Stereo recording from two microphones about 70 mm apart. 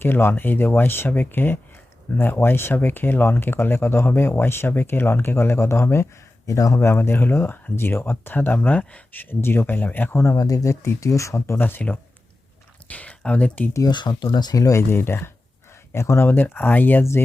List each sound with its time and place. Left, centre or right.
0.0 s speech: left
6.7 s speech: left; by 9.0 s centre
9.1 s speech: left
10.3 s speech: left
11.6 s speech: left
13.7 s speech: left
14.6 s speech: left
14.8 s speech: left
17.0 s speech: left